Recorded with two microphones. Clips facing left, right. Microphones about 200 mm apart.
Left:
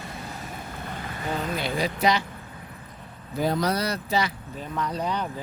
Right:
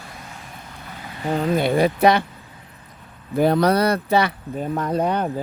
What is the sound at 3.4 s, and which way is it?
Speech, 60° right (ahead or behind).